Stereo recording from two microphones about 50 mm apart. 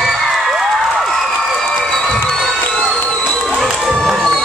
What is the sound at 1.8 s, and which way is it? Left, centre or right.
Cheering, centre.